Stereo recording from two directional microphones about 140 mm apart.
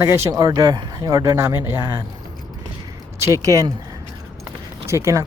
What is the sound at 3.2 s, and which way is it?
Speech, 25° right (ahead or behind).